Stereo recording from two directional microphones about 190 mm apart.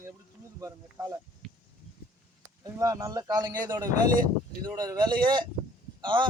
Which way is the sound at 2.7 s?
15° right (ahead or behind).